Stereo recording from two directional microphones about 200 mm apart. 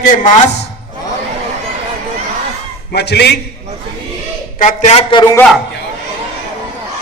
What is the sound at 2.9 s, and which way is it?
Speech, 55° left (ahead or behind).